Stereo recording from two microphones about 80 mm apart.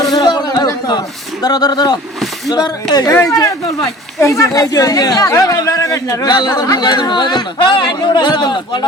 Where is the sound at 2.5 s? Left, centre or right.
Left.